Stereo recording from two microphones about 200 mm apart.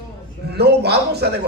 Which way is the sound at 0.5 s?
55° right (ahead or behind).